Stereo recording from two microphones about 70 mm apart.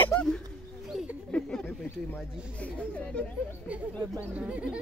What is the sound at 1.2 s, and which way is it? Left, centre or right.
Speech, centre.